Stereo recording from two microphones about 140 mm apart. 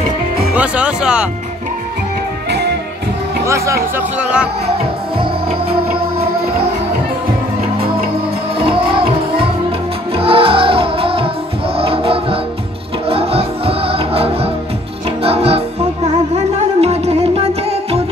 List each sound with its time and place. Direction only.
0.6 s speech: 10° right (ahead or behind)
3.4 s speech: 20° right (ahead or behind)
4.2 s speech: 5° right (ahead or behind)
5.2 s music: 45° right (ahead or behind)
8.5 s music: 40° right (ahead or behind)